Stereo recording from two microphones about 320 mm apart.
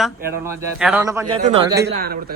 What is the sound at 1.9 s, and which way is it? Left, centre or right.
Speech, right.